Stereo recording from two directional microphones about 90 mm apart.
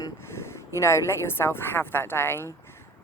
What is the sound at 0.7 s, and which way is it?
A woman's voice, 30° left (ahead or behind).